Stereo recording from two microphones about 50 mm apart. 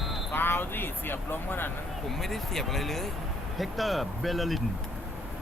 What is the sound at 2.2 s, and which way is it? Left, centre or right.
Speech, centre.